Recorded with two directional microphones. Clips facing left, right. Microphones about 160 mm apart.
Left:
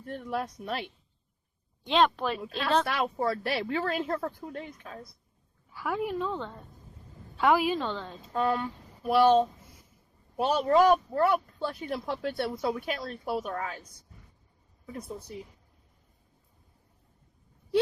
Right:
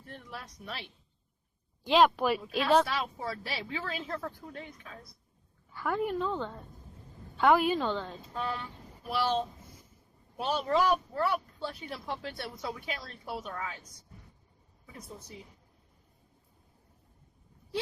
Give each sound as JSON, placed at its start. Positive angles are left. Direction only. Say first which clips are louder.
{"t": 0.0, "sound": "speech", "louder": "left 12 dB", "side_deg": 55}
{"t": 1.8, "sound": "speech", "louder": "right 1 dB", "side_deg": -5}
{"t": 2.8, "sound": "speech", "louder": "left 6 dB", "side_deg": 60}
{"t": 5.7, "sound": "a woman's voice", "louder": "even", "side_deg": 5}
{"t": 8.3, "sound": "speech", "louder": "left 10 dB", "side_deg": 50}